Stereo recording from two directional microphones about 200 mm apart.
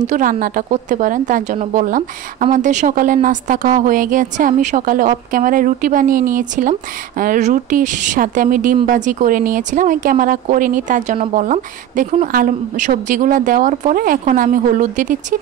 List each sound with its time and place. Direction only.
0.0 s a woman's voice: 40° right (ahead or behind)